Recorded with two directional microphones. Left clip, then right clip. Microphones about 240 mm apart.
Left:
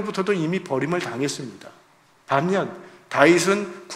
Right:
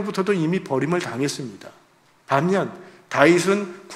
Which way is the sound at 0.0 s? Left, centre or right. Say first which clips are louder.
Right 1 dB; centre.